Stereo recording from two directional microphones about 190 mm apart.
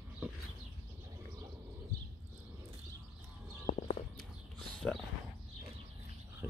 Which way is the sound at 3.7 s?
40° left (ahead or behind).